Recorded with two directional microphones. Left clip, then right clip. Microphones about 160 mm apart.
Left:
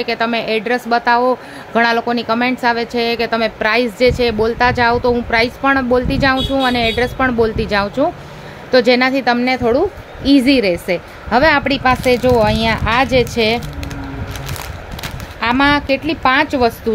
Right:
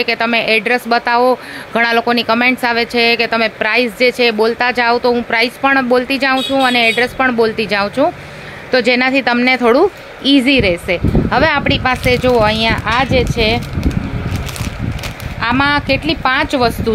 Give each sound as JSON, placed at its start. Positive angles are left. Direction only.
{"t": 0.0, "sound": "speech", "side_deg": 0}
{"t": 10.2, "sound": "speech", "side_deg": 10}
{"t": 12.8, "sound": "speech", "side_deg": 20}
{"t": 15.4, "sound": "speech", "side_deg": 5}